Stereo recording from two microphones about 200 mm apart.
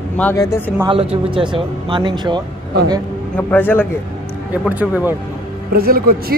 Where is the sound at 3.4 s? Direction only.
10° left (ahead or behind).